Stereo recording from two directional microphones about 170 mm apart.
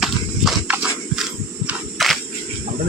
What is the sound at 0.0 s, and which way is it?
Horse, 5° right (ahead or behind).